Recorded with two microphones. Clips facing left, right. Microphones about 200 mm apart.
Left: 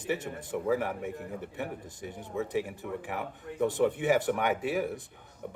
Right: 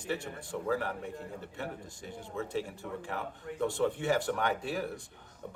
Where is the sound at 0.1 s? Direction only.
15° left (ahead or behind).